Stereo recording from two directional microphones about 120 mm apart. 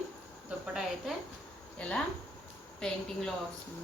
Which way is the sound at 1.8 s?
10° left (ahead or behind).